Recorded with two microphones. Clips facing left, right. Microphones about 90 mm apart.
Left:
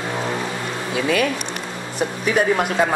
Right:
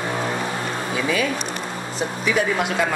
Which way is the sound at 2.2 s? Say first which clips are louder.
Left 3 dB; 45° left (ahead or behind).